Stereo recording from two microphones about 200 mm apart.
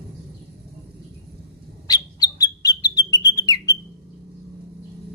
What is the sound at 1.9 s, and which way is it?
Bird, 20° left (ahead or behind).